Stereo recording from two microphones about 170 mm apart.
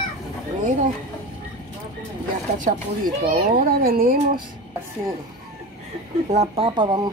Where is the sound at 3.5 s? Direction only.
60° right (ahead or behind).